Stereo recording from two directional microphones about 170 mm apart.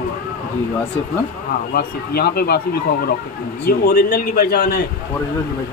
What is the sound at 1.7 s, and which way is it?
Speech, 65° left (ahead or behind).